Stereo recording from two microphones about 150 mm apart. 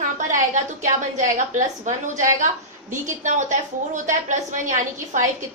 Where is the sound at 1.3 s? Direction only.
55° right (ahead or behind).